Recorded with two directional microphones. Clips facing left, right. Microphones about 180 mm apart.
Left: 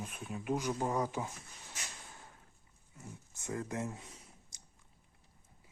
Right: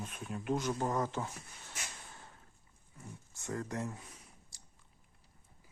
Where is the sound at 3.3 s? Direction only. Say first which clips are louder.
Even; 20° left (ahead or behind).